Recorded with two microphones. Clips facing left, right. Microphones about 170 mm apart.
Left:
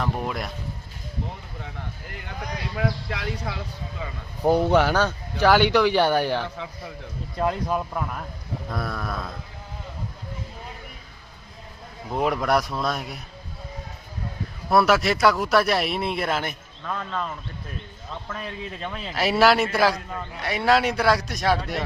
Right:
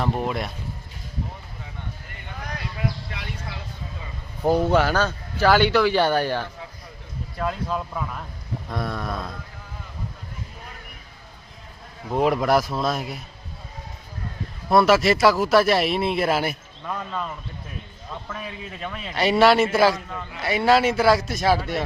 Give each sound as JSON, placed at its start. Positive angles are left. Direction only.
{"t": 0.0, "sound": "a man's voice", "side_deg": 0}
{"t": 2.7, "sound": "speech", "side_deg": 90}
{"t": 4.4, "sound": "a man's voice", "side_deg": 15}
{"t": 12.1, "sound": "a man's voice", "side_deg": 0}
{"t": 14.7, "sound": "a man's voice", "side_deg": 0}